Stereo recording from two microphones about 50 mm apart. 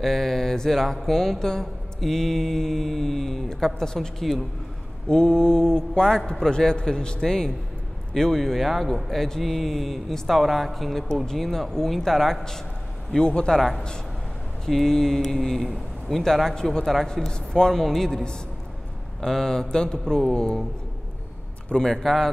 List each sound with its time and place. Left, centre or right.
0.0 s mantra: centre
8.1 s a man's voice: centre
11.2 s mantra: centre
13.6 s a man's voice: centre
16.8 s mantra: centre
21.8 s mantra: centre